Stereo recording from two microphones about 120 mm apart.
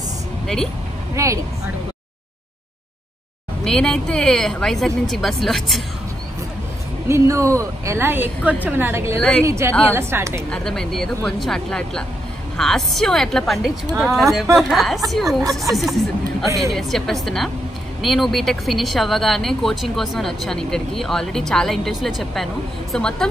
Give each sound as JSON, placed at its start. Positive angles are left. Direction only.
{"t": 1.1, "sound": "speech", "side_deg": -25}
{"t": 3.6, "sound": "speech", "side_deg": 5}
{"t": 7.1, "sound": "a woman's voice", "side_deg": -25}
{"t": 10.5, "sound": "speech", "side_deg": 5}